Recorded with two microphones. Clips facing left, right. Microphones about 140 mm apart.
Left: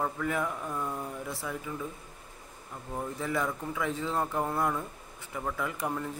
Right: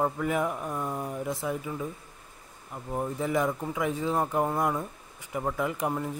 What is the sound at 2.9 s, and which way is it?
Speech, 20° right (ahead or behind).